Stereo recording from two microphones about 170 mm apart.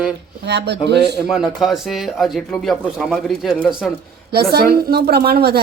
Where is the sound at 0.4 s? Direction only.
80° right.